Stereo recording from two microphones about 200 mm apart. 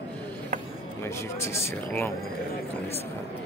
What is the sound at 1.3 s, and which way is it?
Speech, 15° left (ahead or behind).